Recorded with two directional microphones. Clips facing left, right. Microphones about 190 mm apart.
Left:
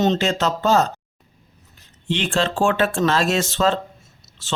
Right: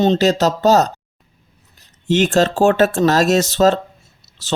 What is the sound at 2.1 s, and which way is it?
Speech, 45° right (ahead or behind).